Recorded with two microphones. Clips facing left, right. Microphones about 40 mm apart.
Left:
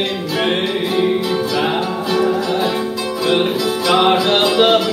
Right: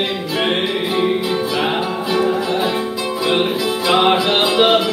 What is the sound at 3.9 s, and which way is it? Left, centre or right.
Music, centre.